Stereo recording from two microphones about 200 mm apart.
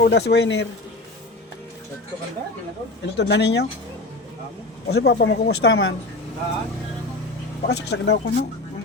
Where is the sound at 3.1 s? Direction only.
55° left (ahead or behind).